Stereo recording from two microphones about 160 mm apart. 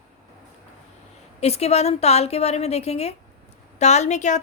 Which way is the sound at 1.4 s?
40° left (ahead or behind).